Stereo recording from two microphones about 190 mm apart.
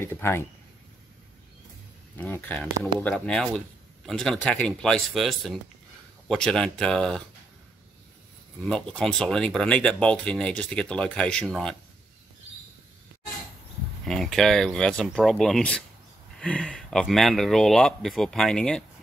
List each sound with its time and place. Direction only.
0.0 s speech: 10° left (ahead or behind)
2.1 s speech: 10° left (ahead or behind)
8.6 s speech: 5° left (ahead or behind)
14.0 s speech: centre (ahead or behind)